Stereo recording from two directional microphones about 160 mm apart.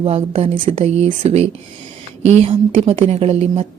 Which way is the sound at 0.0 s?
40° right (ahead or behind).